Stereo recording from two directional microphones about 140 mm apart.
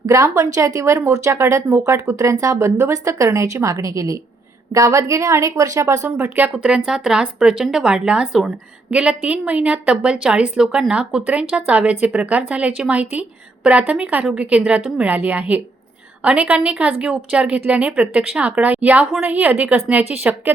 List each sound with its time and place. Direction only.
0.0 s a woman's voice: 25° right (ahead or behind)